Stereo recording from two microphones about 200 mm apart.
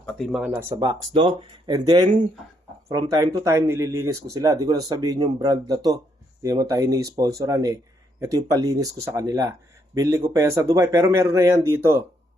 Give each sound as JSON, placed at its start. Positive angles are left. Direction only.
{"t": 0.0, "sound": "speech", "side_deg": 5}
{"t": 0.5, "sound": "speech", "side_deg": -15}